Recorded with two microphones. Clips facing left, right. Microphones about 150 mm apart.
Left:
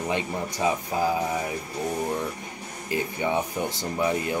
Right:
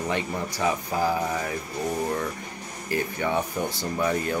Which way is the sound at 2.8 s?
15° left (ahead or behind).